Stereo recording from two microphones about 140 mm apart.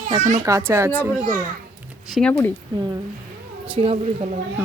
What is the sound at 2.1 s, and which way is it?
Speech, 5° left (ahead or behind).